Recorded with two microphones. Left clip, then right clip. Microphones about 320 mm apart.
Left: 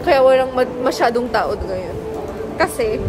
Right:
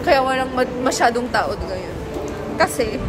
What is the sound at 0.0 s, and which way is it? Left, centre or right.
A woman's voice, centre.